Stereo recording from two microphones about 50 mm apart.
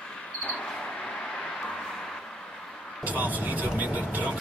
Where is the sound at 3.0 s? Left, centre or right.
Right.